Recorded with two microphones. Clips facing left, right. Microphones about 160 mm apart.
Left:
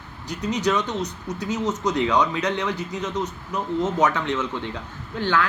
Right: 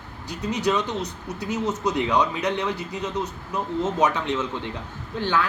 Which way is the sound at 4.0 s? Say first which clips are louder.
Right 1 dB; 20° right (ahead or behind).